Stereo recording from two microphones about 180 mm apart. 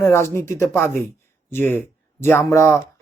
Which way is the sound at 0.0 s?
15° left (ahead or behind).